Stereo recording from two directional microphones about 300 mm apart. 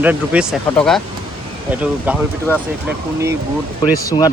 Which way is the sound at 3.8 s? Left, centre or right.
Centre.